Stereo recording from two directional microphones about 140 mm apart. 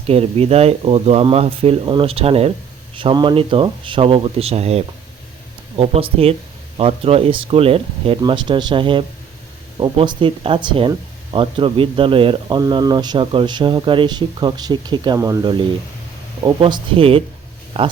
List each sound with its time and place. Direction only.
0.1 s speech: 45° right (ahead or behind)